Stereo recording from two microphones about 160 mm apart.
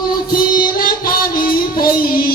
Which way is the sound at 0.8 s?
65° left (ahead or behind).